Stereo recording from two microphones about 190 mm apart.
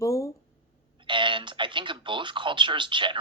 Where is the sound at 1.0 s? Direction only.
25° right (ahead or behind).